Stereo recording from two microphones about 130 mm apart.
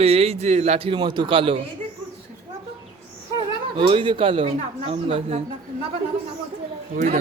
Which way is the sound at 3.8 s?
40° right (ahead or behind).